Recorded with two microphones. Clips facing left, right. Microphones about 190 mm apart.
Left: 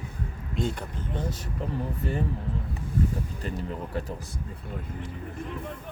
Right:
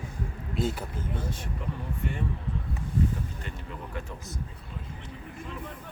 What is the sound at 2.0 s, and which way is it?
Speech, 35° left (ahead or behind).